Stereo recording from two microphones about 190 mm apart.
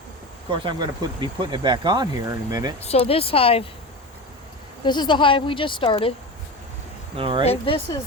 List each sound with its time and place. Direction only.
0.5 s speech: 25° right (ahead or behind)
2.8 s speech: 30° left (ahead or behind)
4.8 s speech: 25° left (ahead or behind)
7.2 s speech: 30° right (ahead or behind)
7.4 s speech: 30° left (ahead or behind)